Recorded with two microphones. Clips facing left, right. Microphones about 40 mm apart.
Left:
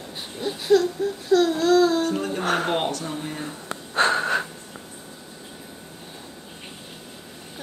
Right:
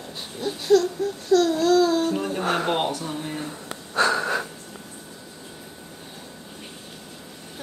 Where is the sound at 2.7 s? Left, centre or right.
Centre.